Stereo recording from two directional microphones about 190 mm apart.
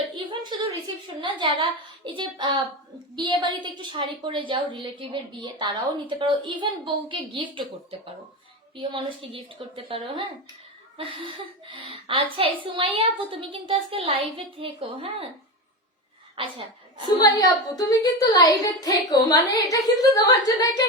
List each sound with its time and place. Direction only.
0.5 s a sound: 25° right (ahead or behind)
1.0 s a woman's voice: 25° right (ahead or behind)
8.7 s a woman's voice: 25° right (ahead or behind)
11.7 s a woman's voice: 30° right (ahead or behind)
16.4 s a woman's voice: 25° right (ahead or behind)
17.1 s a child's voice: 20° left (ahead or behind)